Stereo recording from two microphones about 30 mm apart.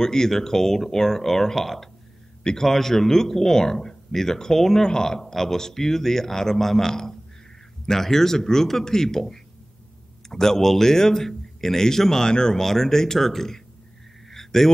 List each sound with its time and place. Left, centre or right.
0.0 s a man's voice: centre
12.3 s speech: left
12.5 s a man's voice: centre
14.3 s a sound: centre